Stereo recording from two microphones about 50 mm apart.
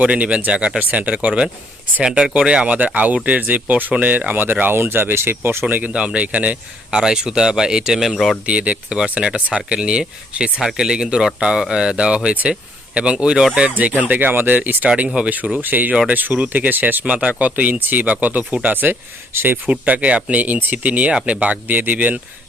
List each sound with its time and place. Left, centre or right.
0.0 s speech: right
2.0 s speech: centre; by 5.6 s right
5.6 s speech: right
5.9 s speech: centre
6.9 s speech: centre
8.4 s speech: right
13.7 s speech: right
14.8 s speech: right
15.6 s speech: right
19.6 s speech: right
21.1 s speech: centre
21.4 s speech: right